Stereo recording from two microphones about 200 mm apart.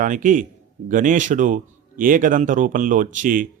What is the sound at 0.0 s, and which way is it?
Speech, 40° right (ahead or behind).